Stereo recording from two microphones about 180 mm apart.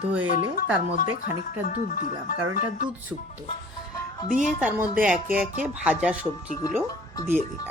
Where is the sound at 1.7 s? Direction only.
50° left (ahead or behind).